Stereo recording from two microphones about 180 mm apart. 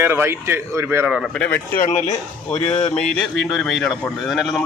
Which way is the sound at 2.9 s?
5° left (ahead or behind).